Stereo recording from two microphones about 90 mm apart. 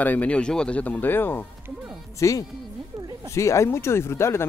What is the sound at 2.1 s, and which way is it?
Speech, 35° left (ahead or behind).